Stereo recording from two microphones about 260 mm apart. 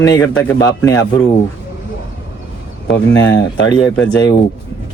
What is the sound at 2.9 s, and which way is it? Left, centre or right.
Speech, left.